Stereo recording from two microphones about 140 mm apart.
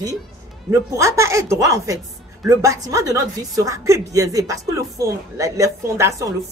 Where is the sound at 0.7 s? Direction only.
20° right (ahead or behind).